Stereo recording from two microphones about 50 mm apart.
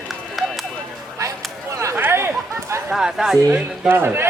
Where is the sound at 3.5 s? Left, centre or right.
Right.